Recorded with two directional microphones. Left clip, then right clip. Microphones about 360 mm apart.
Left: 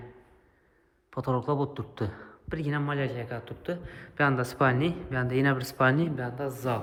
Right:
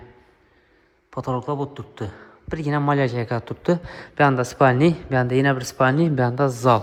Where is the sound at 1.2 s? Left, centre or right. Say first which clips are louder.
Right 3 dB; centre.